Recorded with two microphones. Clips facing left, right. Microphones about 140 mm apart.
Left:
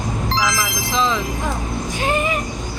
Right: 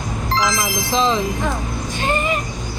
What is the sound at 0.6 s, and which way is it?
Music, 30° right (ahead or behind).